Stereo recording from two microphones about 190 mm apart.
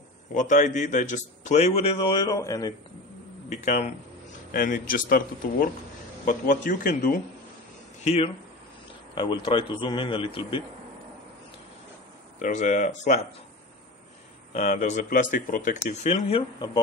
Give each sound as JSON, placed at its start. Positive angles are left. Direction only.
{"t": 0.3, "sound": "a man's voice", "side_deg": 40}
{"t": 3.4, "sound": "speech", "side_deg": 40}
{"t": 8.0, "sound": "a man's voice", "side_deg": 30}
{"t": 12.4, "sound": "a man's voice", "side_deg": 40}
{"t": 14.5, "sound": "a man's voice", "side_deg": 35}